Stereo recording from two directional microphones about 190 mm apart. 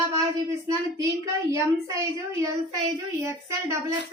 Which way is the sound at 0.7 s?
15° right (ahead or behind).